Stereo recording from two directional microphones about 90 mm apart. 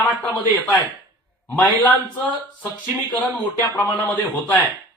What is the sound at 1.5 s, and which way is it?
Speech, 15° left (ahead or behind).